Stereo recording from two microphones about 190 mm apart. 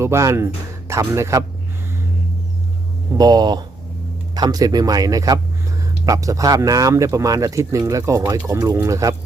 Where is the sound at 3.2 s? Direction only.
20° right (ahead or behind).